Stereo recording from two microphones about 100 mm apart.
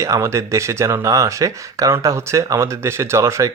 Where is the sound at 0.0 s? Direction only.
30° right (ahead or behind).